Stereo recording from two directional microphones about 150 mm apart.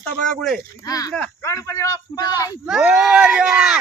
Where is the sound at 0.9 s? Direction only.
25° left (ahead or behind).